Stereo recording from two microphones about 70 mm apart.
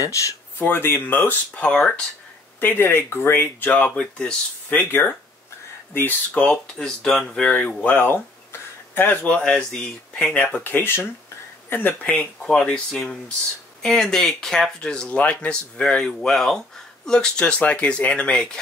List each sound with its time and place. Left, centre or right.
0.0 s speech: left
0.6 s speech: left
2.6 s speech: left
3.7 s speech: centre
4.7 s speech: left
6.3 s speech: centre
10.5 s speech: left; by 18.6 s centre